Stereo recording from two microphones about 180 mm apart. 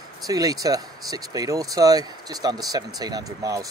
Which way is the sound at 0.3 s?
20° right (ahead or behind).